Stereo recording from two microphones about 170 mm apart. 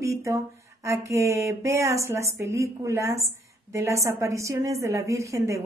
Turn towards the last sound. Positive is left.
turn(degrees=-20)  # may be behind; listen again after turning